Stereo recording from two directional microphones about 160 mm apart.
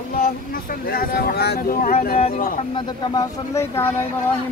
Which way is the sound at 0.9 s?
70° left (ahead or behind).